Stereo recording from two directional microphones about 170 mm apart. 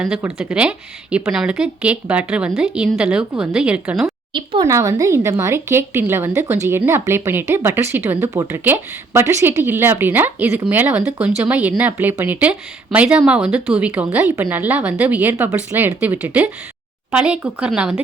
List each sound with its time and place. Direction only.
0.0 s speech: 10° right (ahead or behind)
4.6 s speech: 20° right (ahead or behind)